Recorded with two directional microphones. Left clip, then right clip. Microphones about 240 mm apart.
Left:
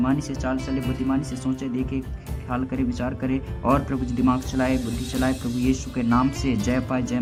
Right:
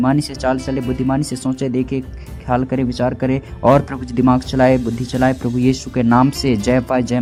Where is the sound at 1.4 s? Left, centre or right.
Right.